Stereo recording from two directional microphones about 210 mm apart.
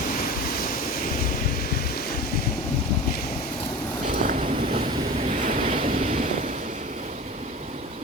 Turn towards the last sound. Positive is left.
turn(degrees=-35)  # may be behind; listen again after turning